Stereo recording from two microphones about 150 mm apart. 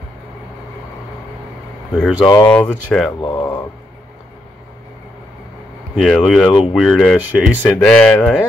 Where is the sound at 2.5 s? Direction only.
5° left (ahead or behind).